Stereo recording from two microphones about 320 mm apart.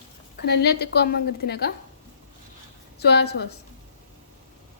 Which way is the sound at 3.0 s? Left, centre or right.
Left.